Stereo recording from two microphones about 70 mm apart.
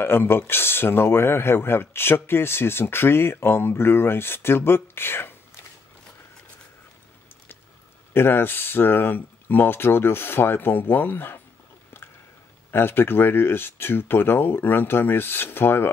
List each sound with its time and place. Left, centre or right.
0.0 s speech: left
8.1 s speech: left
12.7 s speech: left